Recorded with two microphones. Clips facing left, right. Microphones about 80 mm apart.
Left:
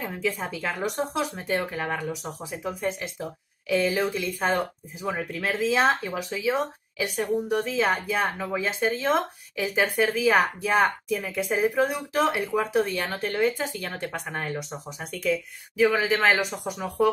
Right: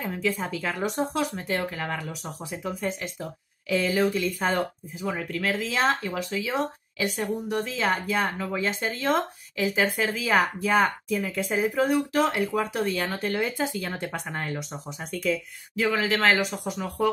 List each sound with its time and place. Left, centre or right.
0.0 s speech: centre
1.3 s speech: centre
5.9 s speech: centre
11.4 s speech: centre